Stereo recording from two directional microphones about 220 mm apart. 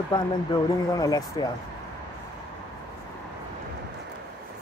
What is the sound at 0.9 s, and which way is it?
Speech, 15° left (ahead or behind).